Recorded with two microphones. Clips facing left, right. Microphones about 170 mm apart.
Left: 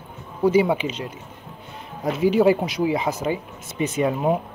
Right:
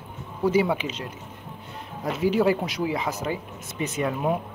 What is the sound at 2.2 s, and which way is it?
Speech, 20° left (ahead or behind).